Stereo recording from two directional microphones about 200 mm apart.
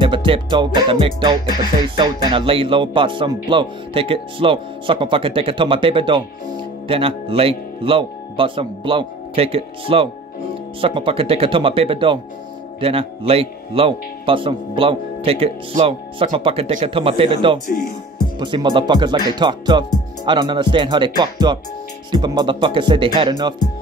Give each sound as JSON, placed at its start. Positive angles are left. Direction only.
{"t": 0.0, "sound": "speech", "side_deg": -25}